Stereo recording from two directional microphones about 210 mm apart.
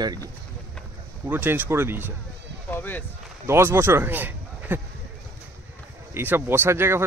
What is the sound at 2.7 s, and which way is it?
Run, 10° left (ahead or behind).